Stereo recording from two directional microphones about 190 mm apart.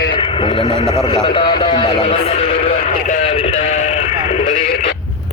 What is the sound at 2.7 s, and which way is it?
Sheep, 45° left (ahead or behind).